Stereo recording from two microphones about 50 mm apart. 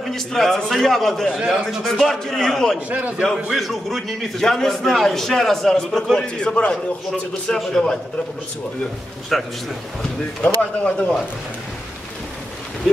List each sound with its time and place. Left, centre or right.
0.1 s a man's voice: centre
2.9 s a man's voice: right
3.5 s a man's voice: centre
9.3 s a man's voice: centre
10.4 s speech: left